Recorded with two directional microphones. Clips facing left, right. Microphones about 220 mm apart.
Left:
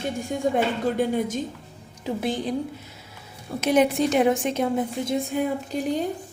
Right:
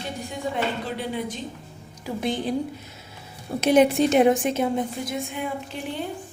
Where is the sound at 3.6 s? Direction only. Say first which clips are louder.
Right 2 dB; 30° right (ahead or behind).